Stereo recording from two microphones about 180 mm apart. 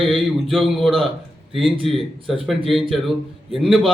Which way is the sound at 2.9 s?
Centre (ahead or behind).